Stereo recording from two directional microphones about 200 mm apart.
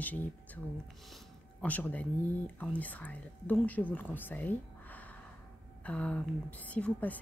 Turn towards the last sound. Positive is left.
turn(degrees=5)  # may be behind; listen again after turning